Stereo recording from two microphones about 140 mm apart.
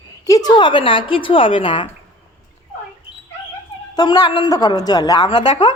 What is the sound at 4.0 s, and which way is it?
A woman's voice, 30° left (ahead or behind).